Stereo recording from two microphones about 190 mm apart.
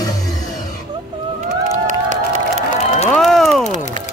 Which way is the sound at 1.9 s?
40° right (ahead or behind).